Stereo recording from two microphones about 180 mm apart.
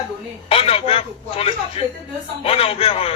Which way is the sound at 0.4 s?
30° left (ahead or behind).